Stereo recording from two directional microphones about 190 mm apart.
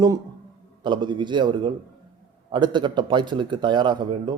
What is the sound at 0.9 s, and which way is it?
A man's voice, 25° right (ahead or behind).